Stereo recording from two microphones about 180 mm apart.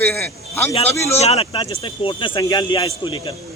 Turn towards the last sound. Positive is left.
turn(degrees=25)  # may be behind; listen again after turning